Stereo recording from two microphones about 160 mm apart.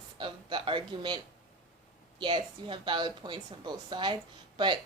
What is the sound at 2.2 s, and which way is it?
A woman's voice, 30° right (ahead or behind).